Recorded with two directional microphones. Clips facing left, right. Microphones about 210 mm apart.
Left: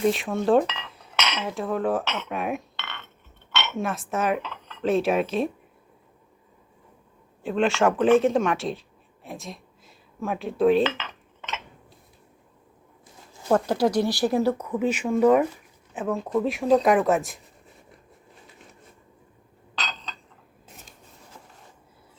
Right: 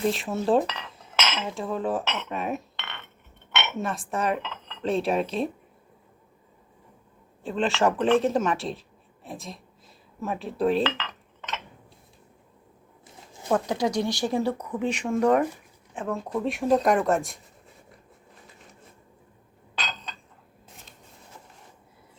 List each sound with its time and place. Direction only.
0.1 s cutlery: centre (ahead or behind)
2.7 s chink: 20° right (ahead or behind)
3.5 s dishes: 20° right (ahead or behind)
3.8 s cutlery: centre (ahead or behind)
7.5 s cutlery: centre (ahead or behind)
9.2 s speech: centre (ahead or behind)
13.5 s cutlery: 5° left (ahead or behind)